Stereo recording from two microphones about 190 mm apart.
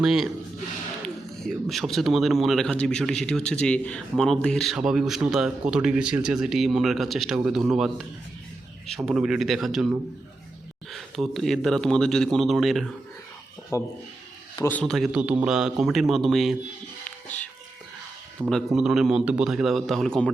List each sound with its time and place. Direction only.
0.0 s a man's voice: centre (ahead or behind)
10.9 s a man's voice: centre (ahead or behind)
13.7 s a man's voice: 15° left (ahead or behind); by 16.6 s centre (ahead or behind)
17.2 s a sound: 10° left (ahead or behind)
18.4 s a man's voice: centre (ahead or behind)